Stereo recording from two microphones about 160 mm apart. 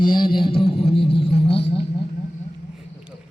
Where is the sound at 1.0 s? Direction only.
90° left.